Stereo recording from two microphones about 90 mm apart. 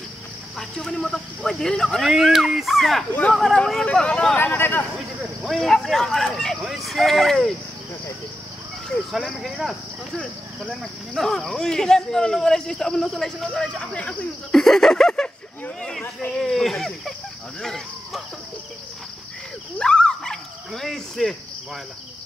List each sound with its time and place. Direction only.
0.6 s speech: 5° left (ahead or behind)
4.4 s speech: 25° left (ahead or behind)
5.4 s speech: centre (ahead or behind)
8.8 s cricket: centre (ahead or behind)
10.1 s speech: 10° left (ahead or behind)
17.6 s a sound: 5° left (ahead or behind)
19.8 s dog: 10° left (ahead or behind)